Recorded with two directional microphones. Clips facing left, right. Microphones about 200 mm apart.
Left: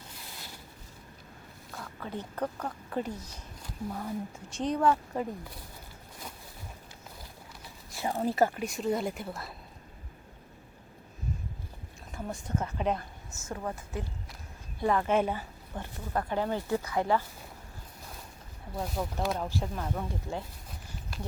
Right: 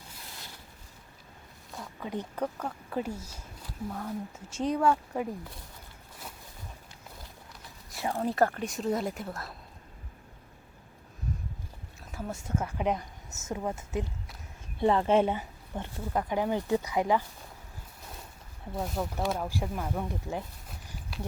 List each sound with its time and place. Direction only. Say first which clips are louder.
1.7 s speech: right 3 dB; 15° right (ahead or behind)
7.9 s speech: even; 5° left (ahead or behind)
12.1 s a woman's voice: right 1 dB; 5° right (ahead or behind)
18.7 s speech: right 1 dB; centre (ahead or behind); by 20.4 s 15° right (ahead or behind)
21.1 s a sound: right 2 dB; centre (ahead or behind)